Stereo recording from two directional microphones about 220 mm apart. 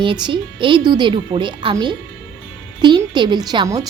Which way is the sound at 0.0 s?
20° right (ahead or behind).